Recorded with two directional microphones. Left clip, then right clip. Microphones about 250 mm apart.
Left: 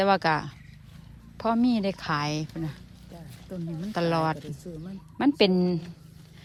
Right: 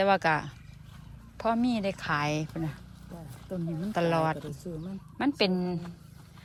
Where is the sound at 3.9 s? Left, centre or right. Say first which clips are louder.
Left 1 dB; centre.